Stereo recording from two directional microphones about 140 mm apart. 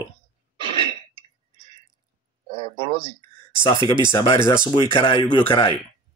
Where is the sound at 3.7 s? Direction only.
35° right (ahead or behind).